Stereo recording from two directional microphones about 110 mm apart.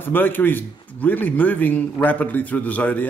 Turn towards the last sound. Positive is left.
turn(degrees=15)  # may be behind; listen again after turning